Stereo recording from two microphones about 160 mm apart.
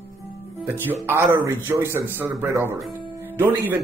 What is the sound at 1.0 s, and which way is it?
Speech, 15° right (ahead or behind).